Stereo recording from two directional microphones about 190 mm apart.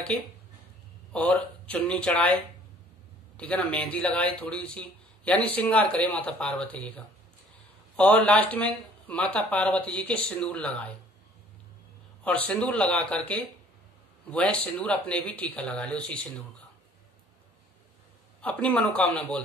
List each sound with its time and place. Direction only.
1.1 s speech: 10° left (ahead or behind)
7.9 s speech: 5° left (ahead or behind)
12.3 s speech: 5° left (ahead or behind)
18.4 s speech: 5° left (ahead or behind)